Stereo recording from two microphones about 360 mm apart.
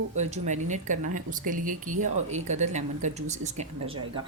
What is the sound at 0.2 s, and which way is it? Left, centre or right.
A woman's voice, centre.